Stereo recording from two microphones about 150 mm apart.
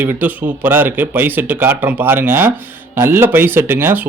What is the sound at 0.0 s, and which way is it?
Speech, 10° right (ahead or behind).